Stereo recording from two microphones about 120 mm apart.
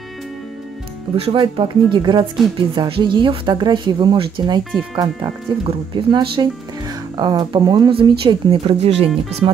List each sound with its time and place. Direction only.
1.1 s speech: 50° right (ahead or behind); by 5.3 s 30° right (ahead or behind)
5.6 s speech: 45° right (ahead or behind)
7.9 s speech: 45° right (ahead or behind)